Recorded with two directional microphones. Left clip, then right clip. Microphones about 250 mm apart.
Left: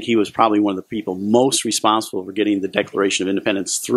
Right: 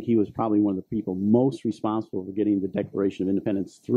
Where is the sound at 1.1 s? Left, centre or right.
Left.